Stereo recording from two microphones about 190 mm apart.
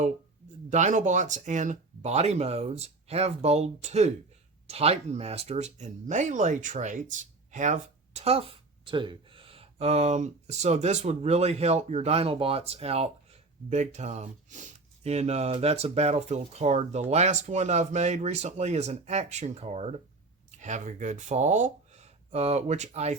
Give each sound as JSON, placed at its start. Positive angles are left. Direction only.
{"t": 0.7, "sound": "speech", "side_deg": -40}